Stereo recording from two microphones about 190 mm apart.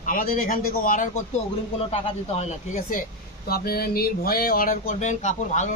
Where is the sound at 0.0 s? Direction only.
45° left (ahead or behind).